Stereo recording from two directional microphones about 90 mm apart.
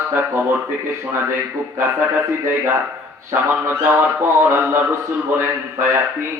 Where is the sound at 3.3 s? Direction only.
25° right (ahead or behind).